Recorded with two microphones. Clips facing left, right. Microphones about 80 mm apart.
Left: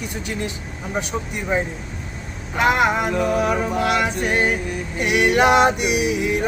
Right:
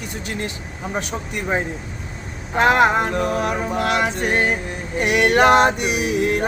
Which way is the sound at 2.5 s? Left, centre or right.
Right.